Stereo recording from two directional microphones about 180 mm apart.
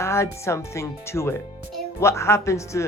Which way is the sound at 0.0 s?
15° left (ahead or behind).